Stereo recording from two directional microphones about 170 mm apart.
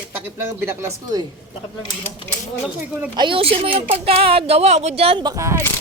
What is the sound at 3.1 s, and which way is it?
Speech, 30° right (ahead or behind).